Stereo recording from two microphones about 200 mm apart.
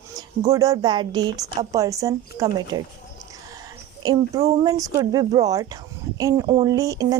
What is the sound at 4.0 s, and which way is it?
Speech, 20° right (ahead or behind).